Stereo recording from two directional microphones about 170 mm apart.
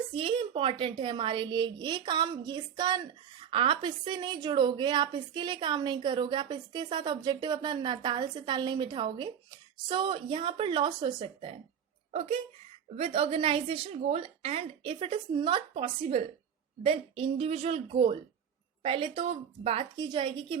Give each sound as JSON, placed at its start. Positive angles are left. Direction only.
{"t": 0.1, "sound": "a woman's voice", "side_deg": -30}